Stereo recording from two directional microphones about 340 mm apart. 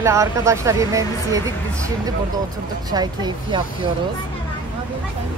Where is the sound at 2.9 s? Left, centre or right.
Centre.